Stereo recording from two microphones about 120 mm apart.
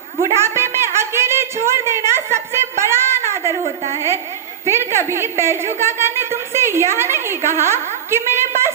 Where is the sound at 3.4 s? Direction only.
30° left (ahead or behind).